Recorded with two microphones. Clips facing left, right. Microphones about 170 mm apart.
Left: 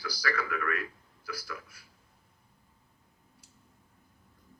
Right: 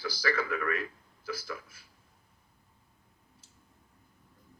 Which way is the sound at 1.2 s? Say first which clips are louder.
Right 3 dB; 25° right (ahead or behind).